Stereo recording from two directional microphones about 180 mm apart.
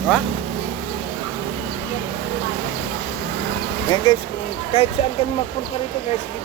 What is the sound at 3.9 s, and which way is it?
Speech, 25° left (ahead or behind).